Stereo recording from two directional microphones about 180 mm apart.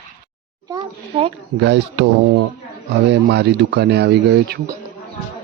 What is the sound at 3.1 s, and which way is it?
A man's voice, 65° right (ahead or behind).